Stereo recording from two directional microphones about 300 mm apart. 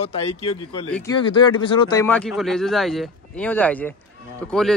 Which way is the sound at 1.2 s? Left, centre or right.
Centre.